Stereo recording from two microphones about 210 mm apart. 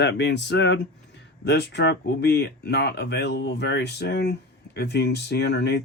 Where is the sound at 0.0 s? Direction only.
55° left (ahead or behind).